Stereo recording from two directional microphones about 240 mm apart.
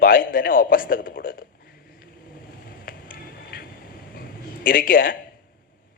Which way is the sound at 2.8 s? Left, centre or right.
Left.